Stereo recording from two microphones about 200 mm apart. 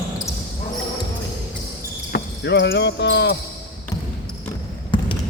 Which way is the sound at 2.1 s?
60° left (ahead or behind).